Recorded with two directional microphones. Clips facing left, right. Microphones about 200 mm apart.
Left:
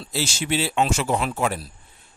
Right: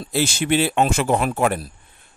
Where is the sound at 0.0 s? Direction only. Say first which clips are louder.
Right 6 dB; 55° right (ahead or behind).